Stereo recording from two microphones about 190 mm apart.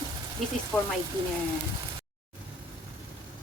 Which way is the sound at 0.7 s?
5° left (ahead or behind).